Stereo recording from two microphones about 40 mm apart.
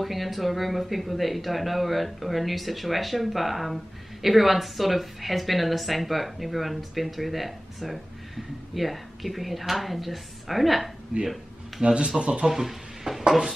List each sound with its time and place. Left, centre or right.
0.0 s speech: centre
11.1 s speech: centre
12.4 s a sound: centre